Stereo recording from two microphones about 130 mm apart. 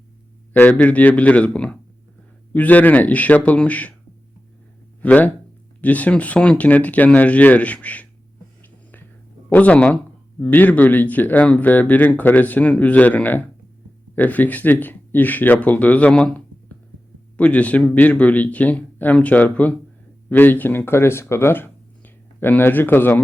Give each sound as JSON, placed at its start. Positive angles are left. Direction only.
{"t": 0.5, "sound": "speech", "side_deg": 10}
{"t": 5.0, "sound": "speech", "side_deg": 10}
{"t": 9.5, "sound": "speech", "side_deg": 10}